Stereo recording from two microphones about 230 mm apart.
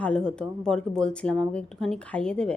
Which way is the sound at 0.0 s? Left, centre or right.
Centre.